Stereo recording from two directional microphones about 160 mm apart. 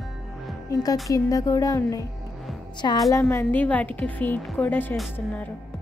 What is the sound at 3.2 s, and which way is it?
A woman's voice, 10° left (ahead or behind).